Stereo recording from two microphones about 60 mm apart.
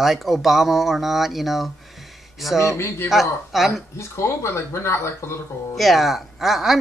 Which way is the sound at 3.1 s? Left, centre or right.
Centre.